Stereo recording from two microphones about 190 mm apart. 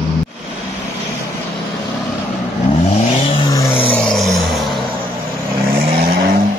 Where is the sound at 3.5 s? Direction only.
30° left (ahead or behind).